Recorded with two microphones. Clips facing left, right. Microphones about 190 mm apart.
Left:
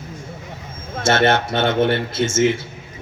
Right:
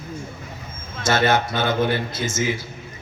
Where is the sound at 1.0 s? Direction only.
25° left (ahead or behind).